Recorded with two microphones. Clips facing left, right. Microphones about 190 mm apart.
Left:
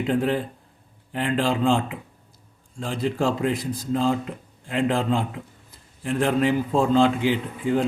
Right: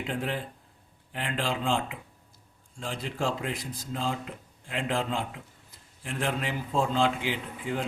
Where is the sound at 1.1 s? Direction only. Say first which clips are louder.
Left 8 dB; 40° left (ahead or behind).